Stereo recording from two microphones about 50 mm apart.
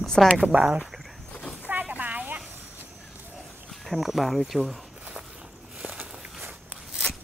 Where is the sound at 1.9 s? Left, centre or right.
Right.